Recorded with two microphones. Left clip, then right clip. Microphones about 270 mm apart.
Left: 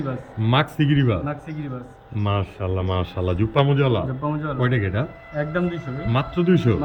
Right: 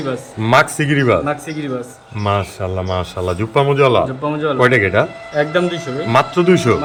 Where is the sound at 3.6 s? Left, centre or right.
Centre.